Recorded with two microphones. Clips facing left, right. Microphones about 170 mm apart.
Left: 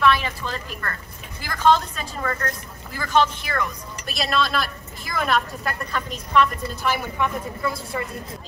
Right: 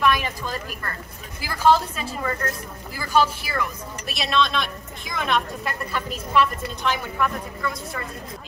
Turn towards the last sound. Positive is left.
turn(degrees=25)  # may be behind; listen again after turning